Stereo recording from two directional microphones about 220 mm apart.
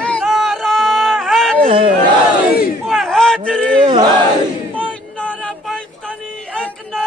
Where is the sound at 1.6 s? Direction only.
25° right (ahead or behind).